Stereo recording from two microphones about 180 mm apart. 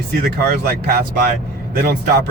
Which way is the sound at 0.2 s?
65° right (ahead or behind).